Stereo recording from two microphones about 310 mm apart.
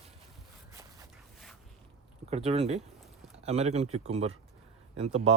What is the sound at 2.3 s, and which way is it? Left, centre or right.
Speech, centre.